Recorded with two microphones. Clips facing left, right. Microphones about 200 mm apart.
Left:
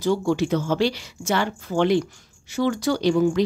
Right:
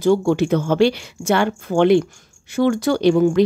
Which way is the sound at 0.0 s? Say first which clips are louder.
Right 5 dB; 55° right (ahead or behind).